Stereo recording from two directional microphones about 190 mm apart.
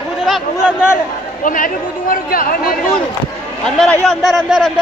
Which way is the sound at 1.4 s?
45° left (ahead or behind).